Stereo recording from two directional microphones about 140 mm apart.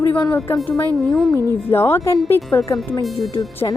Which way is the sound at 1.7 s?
20° left (ahead or behind).